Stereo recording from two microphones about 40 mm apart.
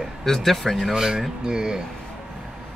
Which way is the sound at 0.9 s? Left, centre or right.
Centre.